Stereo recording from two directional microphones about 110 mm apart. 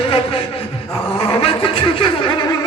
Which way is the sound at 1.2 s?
60° left (ahead or behind).